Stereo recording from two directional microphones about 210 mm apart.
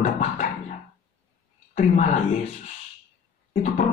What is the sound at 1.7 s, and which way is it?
Speech, 35° left (ahead or behind).